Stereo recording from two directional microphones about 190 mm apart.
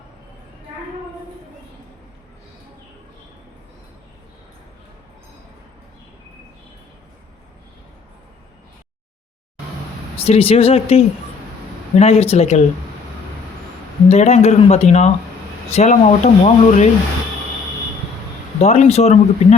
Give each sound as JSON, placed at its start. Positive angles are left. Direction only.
{"t": 10.2, "sound": "speech", "side_deg": 30}
{"t": 14.1, "sound": "speech", "side_deg": 35}
{"t": 18.6, "sound": "speech", "side_deg": 35}